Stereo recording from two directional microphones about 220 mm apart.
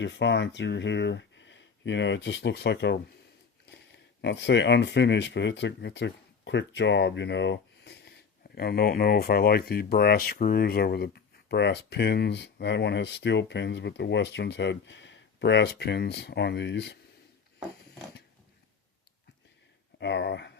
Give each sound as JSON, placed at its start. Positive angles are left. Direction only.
{"t": 0.0, "sound": "speech", "side_deg": 55}
{"t": 20.0, "sound": "speech", "side_deg": 50}